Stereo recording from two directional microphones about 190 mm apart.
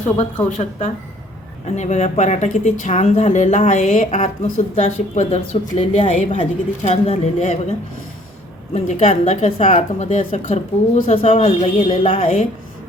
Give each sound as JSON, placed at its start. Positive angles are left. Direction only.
{"t": 0.2, "sound": "a woman's voice", "side_deg": 35}
{"t": 8.7, "sound": "a woman's voice", "side_deg": 35}